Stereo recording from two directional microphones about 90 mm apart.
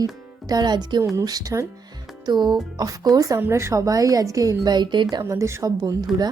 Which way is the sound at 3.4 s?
30° right (ahead or behind).